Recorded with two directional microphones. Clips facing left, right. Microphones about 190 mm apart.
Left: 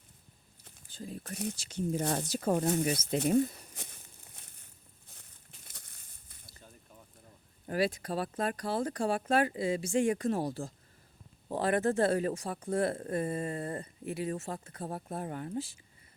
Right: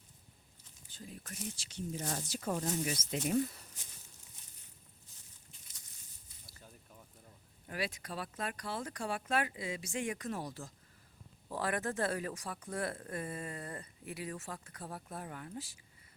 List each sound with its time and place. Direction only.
0.9 s speech: 35° left (ahead or behind)
1.5 s speech: 45° left (ahead or behind)
3.8 s a sound: 55° left (ahead or behind)
5.6 s crumpling: 60° left (ahead or behind)
7.7 s speech: 35° left (ahead or behind)